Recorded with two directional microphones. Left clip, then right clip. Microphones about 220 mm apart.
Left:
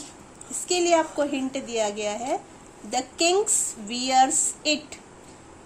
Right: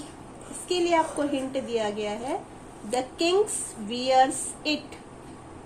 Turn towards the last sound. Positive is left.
turn(degrees=50)  # may be behind; listen again after turning